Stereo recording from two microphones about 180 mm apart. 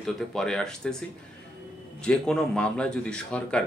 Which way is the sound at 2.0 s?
5° left (ahead or behind).